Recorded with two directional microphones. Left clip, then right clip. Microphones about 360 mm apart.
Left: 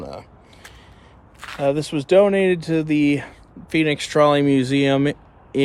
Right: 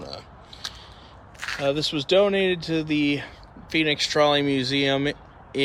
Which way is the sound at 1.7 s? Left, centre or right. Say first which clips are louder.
Left 4 dB; centre.